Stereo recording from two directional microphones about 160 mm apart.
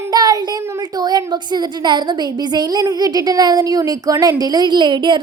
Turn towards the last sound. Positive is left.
turn(degrees=-30)  # may be behind; listen again after turning